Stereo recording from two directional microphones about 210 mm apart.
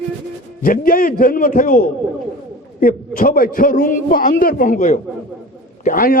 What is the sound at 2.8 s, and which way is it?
A man's voice, 45° left (ahead or behind).